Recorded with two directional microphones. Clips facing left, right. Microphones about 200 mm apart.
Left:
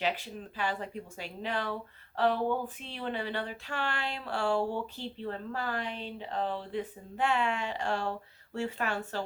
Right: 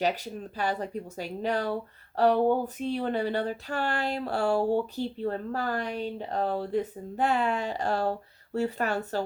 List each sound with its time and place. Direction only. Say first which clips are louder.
0.0 s speech: right 5 dB; 40° right (ahead or behind)